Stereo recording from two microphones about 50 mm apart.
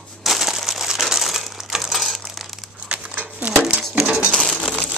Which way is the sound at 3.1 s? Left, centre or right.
Right.